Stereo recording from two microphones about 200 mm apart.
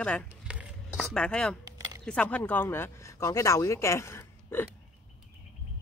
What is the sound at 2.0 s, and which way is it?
Speech, 5° left (ahead or behind).